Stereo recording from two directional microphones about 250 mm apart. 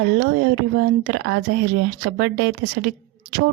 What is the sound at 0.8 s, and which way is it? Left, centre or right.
A woman's voice, right.